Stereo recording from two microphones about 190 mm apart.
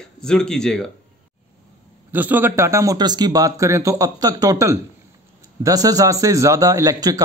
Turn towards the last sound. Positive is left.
turn(degrees=-20)  # may be behind; listen again after turning